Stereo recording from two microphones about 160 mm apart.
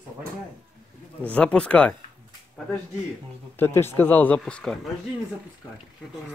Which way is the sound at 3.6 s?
15° left (ahead or behind).